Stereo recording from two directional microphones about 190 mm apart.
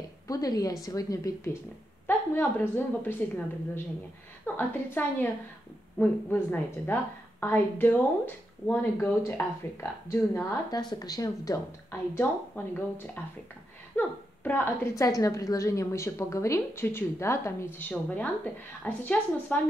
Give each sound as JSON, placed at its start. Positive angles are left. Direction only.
{"t": 0.3, "sound": "a woman's voice", "side_deg": 20}
{"t": 10.9, "sound": "a woman's voice", "side_deg": 20}